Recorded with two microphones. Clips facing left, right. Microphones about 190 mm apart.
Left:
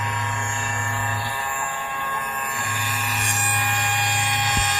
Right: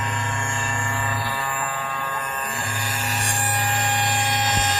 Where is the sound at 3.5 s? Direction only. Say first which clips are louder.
Right 2 dB; 35° right (ahead or behind).